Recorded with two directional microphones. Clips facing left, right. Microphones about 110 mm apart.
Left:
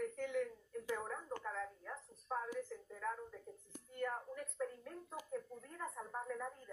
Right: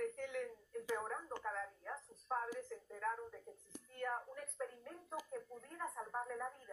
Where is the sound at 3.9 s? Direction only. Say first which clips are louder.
Left 1 dB; centre (ahead or behind).